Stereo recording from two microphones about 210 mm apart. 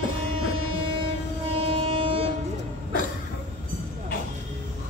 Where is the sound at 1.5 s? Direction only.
25° right (ahead or behind).